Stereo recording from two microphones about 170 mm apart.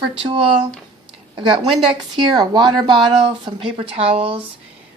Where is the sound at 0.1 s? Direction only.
35° right (ahead or behind).